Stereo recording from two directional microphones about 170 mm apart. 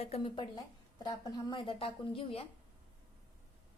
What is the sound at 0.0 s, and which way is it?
A woman's voice, 35° left (ahead or behind).